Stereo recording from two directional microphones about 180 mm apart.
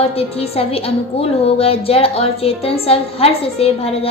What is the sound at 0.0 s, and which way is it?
A woman's voice, 35° left (ahead or behind).